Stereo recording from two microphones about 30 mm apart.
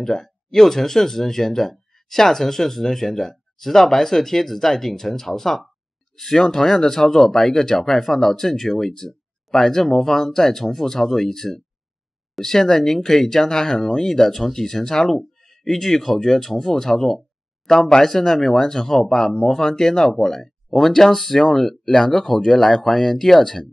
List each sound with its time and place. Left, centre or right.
0.0 s speech: centre
15.1 s a sound: centre
15.7 s speech: centre